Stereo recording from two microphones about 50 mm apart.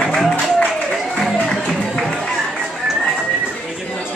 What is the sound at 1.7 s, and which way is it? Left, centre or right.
Music, centre.